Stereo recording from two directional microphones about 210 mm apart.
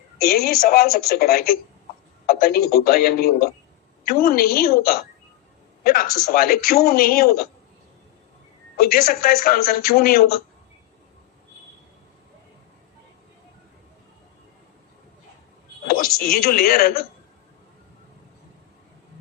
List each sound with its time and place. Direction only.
0.2 s a man's voice: 45° left (ahead or behind)
8.8 s a man's voice: 45° left (ahead or behind)
15.9 s a man's voice: 45° left (ahead or behind)